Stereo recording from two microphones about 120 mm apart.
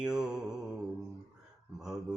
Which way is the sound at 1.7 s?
5° right (ahead or behind).